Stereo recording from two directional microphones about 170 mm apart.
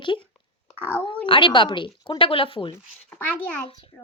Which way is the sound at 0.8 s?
10° right (ahead or behind).